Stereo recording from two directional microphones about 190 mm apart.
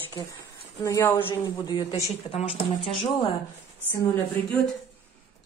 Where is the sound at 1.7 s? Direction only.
25° left (ahead or behind).